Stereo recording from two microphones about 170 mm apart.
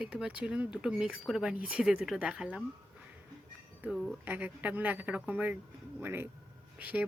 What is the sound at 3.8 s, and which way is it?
Speech, 5° right (ahead or behind).